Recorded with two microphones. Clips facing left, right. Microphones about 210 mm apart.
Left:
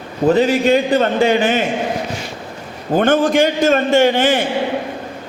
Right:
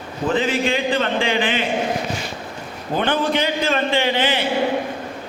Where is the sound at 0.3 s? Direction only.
40° left (ahead or behind).